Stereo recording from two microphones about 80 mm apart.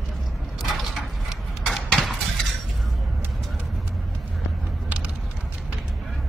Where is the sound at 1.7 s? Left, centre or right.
Centre.